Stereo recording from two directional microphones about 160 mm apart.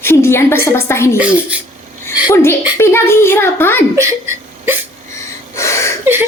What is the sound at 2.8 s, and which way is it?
A child's voice, 15° left (ahead or behind).